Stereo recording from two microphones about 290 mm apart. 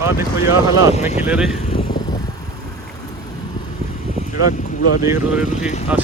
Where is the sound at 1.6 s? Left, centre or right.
Centre.